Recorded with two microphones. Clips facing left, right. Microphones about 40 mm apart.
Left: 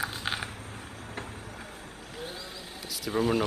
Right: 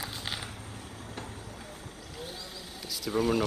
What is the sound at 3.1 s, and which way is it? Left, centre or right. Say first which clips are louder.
Speech: left 1 dB; centre.